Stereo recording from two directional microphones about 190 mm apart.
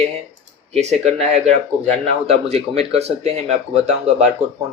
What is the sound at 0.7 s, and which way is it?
Speech, 35° right (ahead or behind).